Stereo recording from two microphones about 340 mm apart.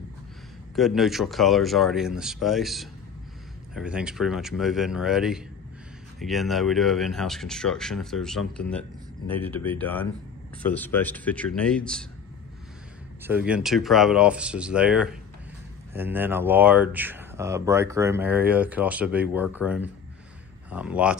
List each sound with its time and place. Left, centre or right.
0.7 s speech: centre
13.2 s speech: centre